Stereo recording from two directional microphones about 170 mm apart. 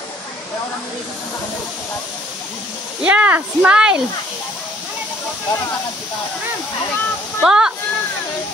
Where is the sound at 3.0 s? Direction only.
5° right (ahead or behind).